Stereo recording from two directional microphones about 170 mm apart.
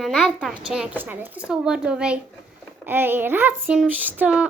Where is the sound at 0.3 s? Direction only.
5° right (ahead or behind).